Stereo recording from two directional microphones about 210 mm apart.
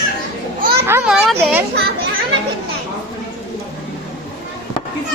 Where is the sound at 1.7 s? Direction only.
50° right (ahead or behind).